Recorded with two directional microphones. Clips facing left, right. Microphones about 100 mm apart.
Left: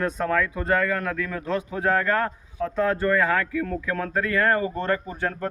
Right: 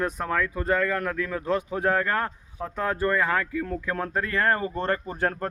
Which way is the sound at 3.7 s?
25° right (ahead or behind).